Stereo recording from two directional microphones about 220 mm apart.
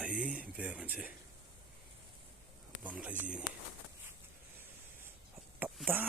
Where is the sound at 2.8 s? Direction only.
5° right (ahead or behind).